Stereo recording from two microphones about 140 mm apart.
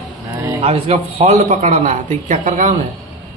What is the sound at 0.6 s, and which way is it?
Speech, 45° right (ahead or behind).